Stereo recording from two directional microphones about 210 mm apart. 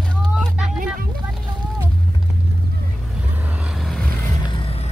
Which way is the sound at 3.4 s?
5° right (ahead or behind).